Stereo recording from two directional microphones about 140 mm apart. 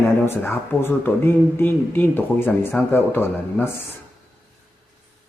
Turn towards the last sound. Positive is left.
turn(degrees=15)  # may be behind; listen again after turning